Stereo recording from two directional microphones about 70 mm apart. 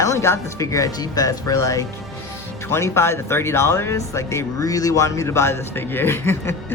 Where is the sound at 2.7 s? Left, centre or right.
Left.